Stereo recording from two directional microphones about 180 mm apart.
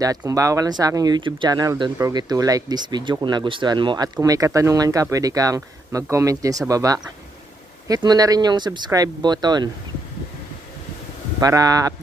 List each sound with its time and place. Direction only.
0.0 s speech: 20° right (ahead or behind)
11.3 s speech: 20° right (ahead or behind)